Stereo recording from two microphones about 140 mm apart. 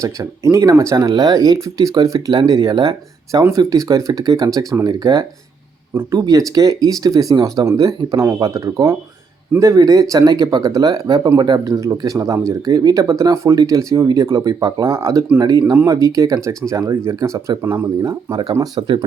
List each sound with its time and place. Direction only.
0.0 s speech: 20° right (ahead or behind)
15.7 s speech: 15° right (ahead or behind)
18.3 s speech: 30° right (ahead or behind)